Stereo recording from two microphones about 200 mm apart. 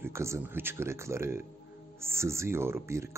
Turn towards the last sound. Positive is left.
turn(degrees=-15)  # may be behind; listen again after turning